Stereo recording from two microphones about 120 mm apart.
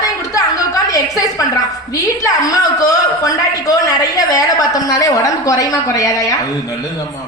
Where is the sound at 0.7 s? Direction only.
30° left (ahead or behind).